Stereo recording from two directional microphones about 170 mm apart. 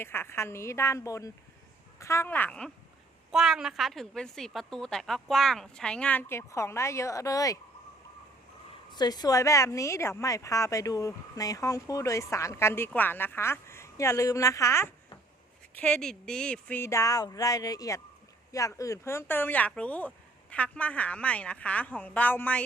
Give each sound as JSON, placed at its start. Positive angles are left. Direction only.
{"t": 0.0, "sound": "a woman's voice", "side_deg": 15}
{"t": 8.9, "sound": "a woman's voice", "side_deg": 25}
{"t": 15.7, "sound": "speech", "side_deg": 5}